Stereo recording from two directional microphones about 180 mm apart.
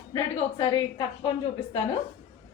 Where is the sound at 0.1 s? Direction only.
25° left (ahead or behind).